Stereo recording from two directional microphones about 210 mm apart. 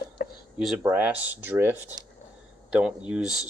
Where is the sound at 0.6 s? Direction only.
5° right (ahead or behind).